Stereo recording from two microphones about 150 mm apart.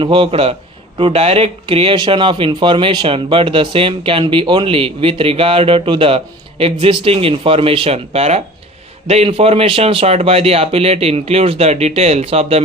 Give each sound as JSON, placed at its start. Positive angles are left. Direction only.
{"t": 0.0, "sound": "speech", "side_deg": -35}